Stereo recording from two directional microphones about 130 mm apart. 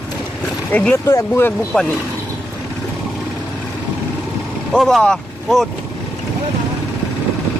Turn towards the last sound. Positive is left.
turn(degrees=5)  # may be behind; listen again after turning